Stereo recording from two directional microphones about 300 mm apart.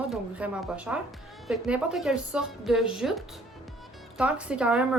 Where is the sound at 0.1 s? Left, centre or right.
Centre.